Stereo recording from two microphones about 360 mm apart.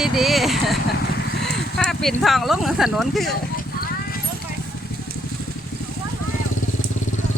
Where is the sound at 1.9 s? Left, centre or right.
Centre.